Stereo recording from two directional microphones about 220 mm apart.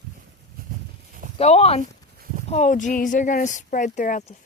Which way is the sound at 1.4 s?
30° left (ahead or behind).